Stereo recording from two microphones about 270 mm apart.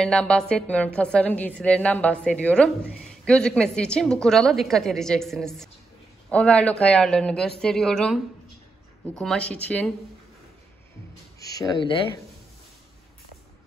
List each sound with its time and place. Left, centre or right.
0.0 s a woman's voice: centre
11.3 s speech: centre